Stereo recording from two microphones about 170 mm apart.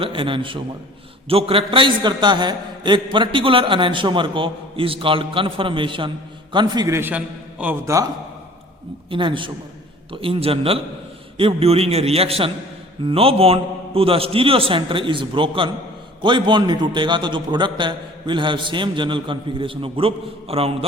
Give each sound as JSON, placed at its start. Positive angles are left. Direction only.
{"t": 0.0, "sound": "a man's voice", "side_deg": -30}
{"t": 9.0, "sound": "a man's voice", "side_deg": -30}